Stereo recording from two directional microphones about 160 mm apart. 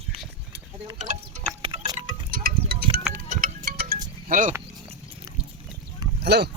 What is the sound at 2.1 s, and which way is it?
Wind chime, 65° right (ahead or behind).